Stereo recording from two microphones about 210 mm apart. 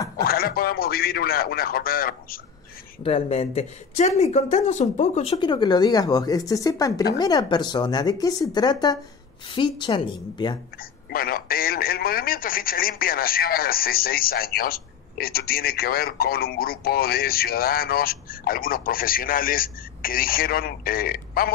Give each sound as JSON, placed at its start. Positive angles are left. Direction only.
{"t": 0.2, "sound": "speech", "side_deg": 45}
{"t": 3.0, "sound": "speech", "side_deg": 30}
{"t": 10.8, "sound": "speech", "side_deg": 45}